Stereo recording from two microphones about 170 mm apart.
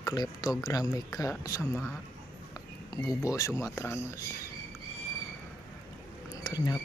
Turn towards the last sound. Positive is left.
turn(degrees=25)  # may be behind; listen again after turning